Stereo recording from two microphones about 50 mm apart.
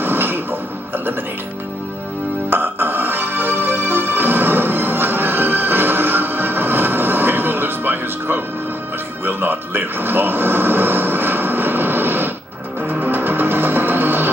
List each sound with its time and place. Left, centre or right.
0.0 s music: right
2.5 s music: right
9.2 s television: right
13.0 s music: right